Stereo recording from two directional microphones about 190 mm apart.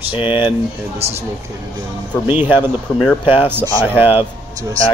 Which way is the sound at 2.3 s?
10° right (ahead or behind).